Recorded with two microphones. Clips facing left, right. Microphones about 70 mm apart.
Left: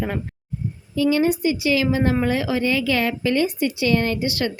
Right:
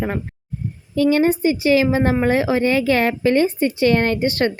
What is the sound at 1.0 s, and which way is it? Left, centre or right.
A woman's voice, right.